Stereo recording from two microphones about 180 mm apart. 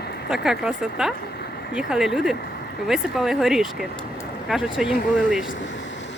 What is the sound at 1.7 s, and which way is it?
Speech, 5° right (ahead or behind).